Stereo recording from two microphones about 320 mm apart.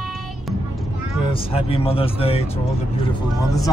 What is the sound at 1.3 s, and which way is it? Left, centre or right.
Speech, centre.